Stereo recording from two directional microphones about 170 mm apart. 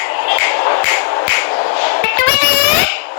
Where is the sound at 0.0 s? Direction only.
70° left (ahead or behind).